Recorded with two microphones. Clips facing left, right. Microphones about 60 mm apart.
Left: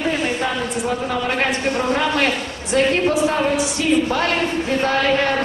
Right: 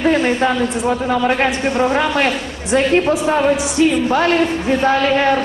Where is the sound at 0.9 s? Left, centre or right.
Right.